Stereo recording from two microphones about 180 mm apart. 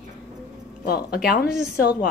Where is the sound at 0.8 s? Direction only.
60° left (ahead or behind).